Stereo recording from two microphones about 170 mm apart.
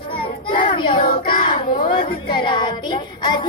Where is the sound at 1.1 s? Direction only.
55° left (ahead or behind).